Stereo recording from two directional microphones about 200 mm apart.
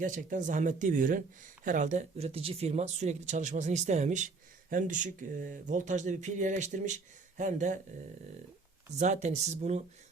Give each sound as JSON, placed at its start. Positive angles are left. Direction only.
{"t": 0.0, "sound": "speech", "side_deg": -40}
{"t": 9.0, "sound": "speech", "side_deg": -35}